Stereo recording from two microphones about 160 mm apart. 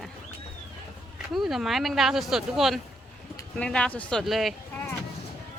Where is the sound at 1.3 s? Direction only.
Centre (ahead or behind).